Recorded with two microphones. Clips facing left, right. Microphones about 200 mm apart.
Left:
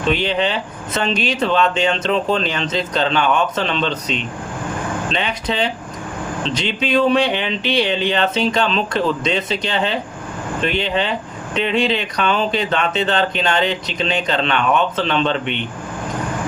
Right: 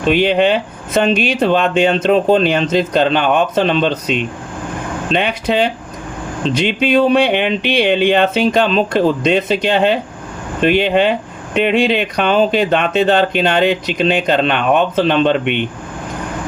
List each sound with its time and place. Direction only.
0.1 s speech: 60° right (ahead or behind)
5.1 s speech: 55° right (ahead or behind)